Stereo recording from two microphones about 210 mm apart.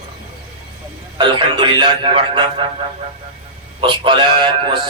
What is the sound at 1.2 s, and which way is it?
Speech, 20° right (ahead or behind).